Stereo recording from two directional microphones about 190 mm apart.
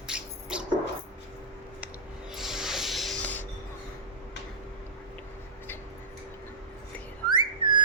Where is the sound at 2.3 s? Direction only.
Centre (ahead or behind).